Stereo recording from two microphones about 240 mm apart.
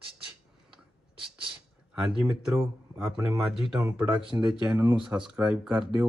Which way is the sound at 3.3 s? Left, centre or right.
Centre.